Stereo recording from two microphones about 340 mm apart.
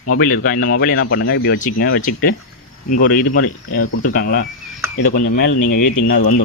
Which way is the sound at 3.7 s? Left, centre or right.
Left.